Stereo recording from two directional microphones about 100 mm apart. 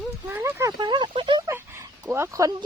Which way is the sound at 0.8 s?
50° right (ahead or behind).